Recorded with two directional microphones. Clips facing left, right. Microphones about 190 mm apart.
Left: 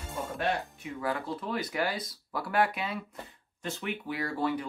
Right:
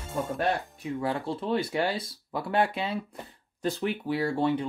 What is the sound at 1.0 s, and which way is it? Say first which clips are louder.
Speech: right 2 dB; 30° right (ahead or behind).